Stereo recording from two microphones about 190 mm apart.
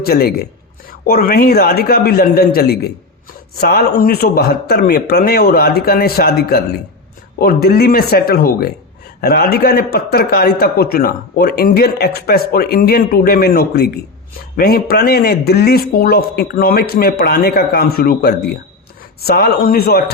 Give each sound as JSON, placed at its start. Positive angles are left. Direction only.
{"t": 0.0, "sound": "a man's voice", "side_deg": 55}